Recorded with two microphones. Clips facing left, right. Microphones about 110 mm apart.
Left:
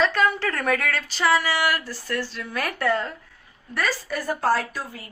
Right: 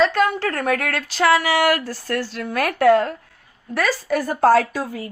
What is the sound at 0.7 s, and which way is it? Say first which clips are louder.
Speech: right 1 dB; 55° right (ahead or behind).